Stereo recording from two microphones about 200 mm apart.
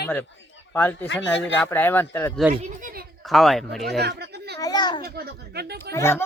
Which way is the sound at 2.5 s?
40° right (ahead or behind).